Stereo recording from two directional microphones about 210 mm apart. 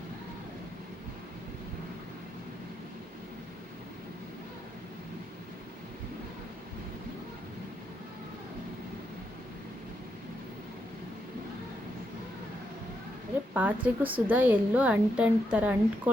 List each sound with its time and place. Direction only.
13.5 s a woman's voice: 10° right (ahead or behind)